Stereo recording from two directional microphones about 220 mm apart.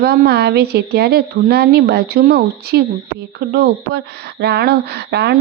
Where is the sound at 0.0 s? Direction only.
45° right (ahead or behind).